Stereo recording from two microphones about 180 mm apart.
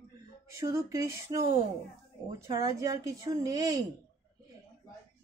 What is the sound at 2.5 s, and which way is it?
Speech, 20° right (ahead or behind).